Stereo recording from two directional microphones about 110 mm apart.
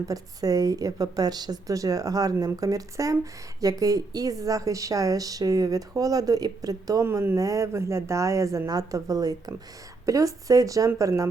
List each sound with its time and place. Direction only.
0.1 s speech: 35° right (ahead or behind)